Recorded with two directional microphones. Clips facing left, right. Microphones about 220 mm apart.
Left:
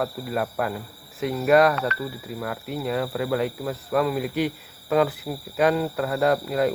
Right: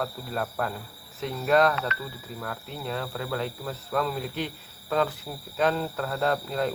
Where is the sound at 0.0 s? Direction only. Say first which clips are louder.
Left 5 dB; 10° left (ahead or behind).